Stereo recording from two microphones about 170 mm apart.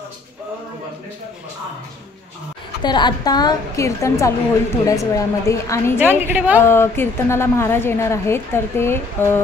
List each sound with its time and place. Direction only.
2.8 s a woman's voice: 25° left (ahead or behind)
5.9 s a woman's voice: 10° right (ahead or behind)
6.6 s a woman's voice: 15° left (ahead or behind)